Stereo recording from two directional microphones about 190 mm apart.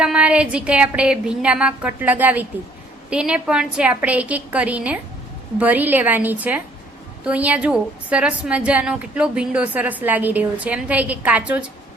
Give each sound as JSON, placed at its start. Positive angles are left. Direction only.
{"t": 0.0, "sound": "a woman's voice", "side_deg": -5}